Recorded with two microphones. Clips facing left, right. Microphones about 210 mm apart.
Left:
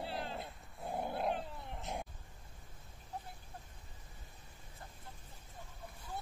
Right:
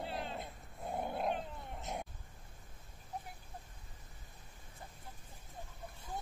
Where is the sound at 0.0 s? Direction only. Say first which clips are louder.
Even; centre (ahead or behind).